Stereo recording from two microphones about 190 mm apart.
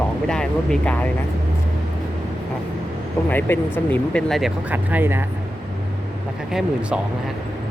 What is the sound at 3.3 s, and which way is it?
Speech, 10° left (ahead or behind).